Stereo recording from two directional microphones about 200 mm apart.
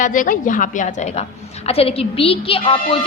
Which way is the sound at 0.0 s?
40° left (ahead or behind).